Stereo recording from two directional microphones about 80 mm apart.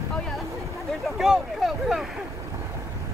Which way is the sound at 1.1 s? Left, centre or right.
Centre.